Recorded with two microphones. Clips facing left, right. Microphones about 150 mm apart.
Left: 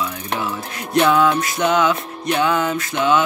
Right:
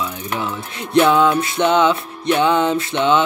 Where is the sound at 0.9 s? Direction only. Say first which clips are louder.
Right 2 dB; 25° right (ahead or behind).